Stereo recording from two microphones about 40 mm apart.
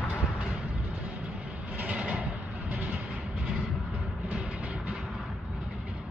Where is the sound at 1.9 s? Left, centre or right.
Right.